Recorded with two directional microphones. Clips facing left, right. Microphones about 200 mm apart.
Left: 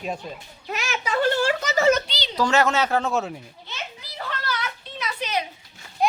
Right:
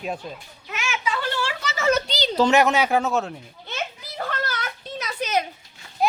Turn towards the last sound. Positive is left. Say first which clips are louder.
# even
turn(degrees=-5)  # may be behind; listen again after turning